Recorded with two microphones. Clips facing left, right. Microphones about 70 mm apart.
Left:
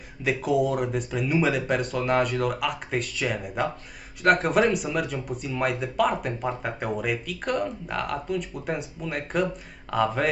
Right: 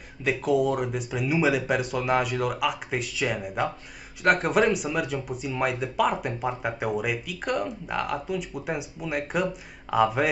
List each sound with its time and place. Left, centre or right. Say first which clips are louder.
0.2 s speech: even; centre